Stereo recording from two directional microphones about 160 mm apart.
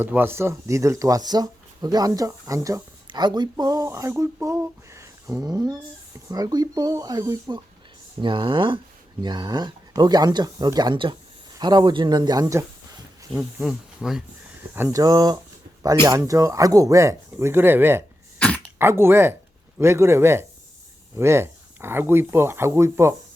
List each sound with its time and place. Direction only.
0.0 s speech: 15° right (ahead or behind)
13.3 s speech: centre (ahead or behind)
15.0 s speech: 25° right (ahead or behind)
18.3 s throat clearing: 10° left (ahead or behind)
18.8 s speech: 15° right (ahead or behind)